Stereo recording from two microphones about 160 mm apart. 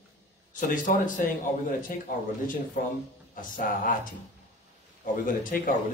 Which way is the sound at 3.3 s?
60° left (ahead or behind).